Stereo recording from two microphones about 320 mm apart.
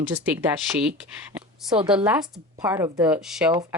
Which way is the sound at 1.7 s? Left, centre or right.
Centre.